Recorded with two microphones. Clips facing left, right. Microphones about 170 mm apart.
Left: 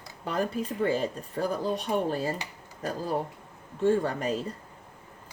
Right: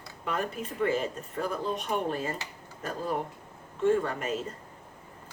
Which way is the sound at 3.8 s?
35° left (ahead or behind).